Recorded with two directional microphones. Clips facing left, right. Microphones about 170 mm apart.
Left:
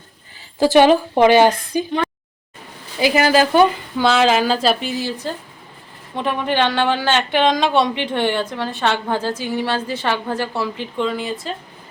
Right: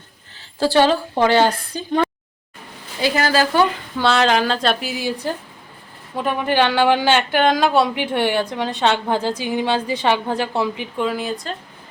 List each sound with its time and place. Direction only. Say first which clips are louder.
0.6 s a woman's voice: left 4 dB; 15° left (ahead or behind)
3.0 s a woman's voice: left 3 dB; 15° left (ahead or behind)
3.9 s a woman's voice: even; centre (ahead or behind)